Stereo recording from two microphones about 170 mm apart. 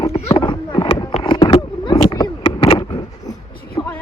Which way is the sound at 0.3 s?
30° left (ahead or behind).